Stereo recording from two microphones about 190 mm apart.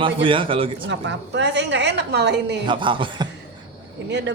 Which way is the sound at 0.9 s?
65° right (ahead or behind).